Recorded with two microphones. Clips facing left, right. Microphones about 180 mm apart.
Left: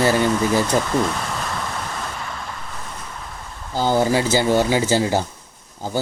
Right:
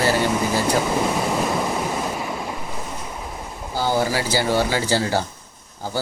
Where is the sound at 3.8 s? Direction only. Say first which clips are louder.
Left 3 dB; 20° left (ahead or behind).